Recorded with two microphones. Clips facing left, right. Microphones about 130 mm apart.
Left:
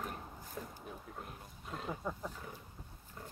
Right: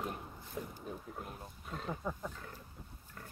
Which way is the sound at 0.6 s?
15° right (ahead or behind).